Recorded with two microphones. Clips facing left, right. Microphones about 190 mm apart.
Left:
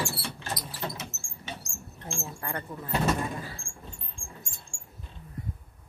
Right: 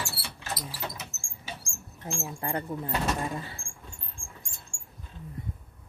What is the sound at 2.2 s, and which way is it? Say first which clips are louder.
Speech: right 4 dB; 25° right (ahead or behind).